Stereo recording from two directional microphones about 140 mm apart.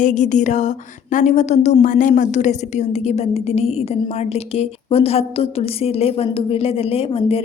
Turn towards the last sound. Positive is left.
turn(degrees=45)  # may be behind; listen again after turning